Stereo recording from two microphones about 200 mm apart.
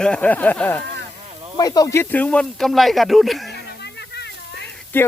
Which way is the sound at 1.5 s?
20° left (ahead or behind).